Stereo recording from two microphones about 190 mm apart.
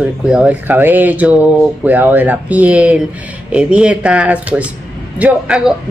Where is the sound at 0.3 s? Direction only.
5° right (ahead or behind).